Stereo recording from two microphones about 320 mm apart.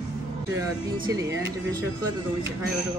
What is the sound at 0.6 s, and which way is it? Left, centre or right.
Speech, centre.